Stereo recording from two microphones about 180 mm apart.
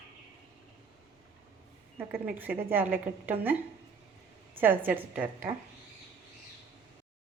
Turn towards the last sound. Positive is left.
turn(degrees=-10)  # may be behind; listen again after turning